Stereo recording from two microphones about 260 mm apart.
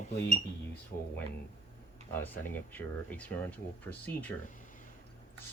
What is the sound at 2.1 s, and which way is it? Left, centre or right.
Speech, centre.